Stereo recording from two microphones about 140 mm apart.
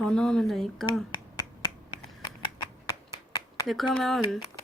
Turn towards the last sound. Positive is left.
turn(degrees=0)  # may be behind; listen again after turning